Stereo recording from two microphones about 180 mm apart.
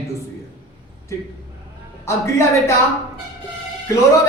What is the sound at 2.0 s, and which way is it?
Speech, 15° left (ahead or behind).